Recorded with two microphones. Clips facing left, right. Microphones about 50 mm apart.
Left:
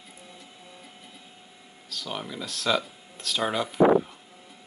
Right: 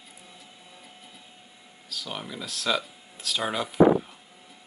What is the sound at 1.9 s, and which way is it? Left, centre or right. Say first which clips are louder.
Speech: left 1 dB; centre.